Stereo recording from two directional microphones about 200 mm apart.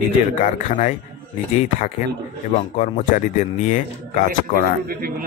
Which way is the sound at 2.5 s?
35° left (ahead or behind).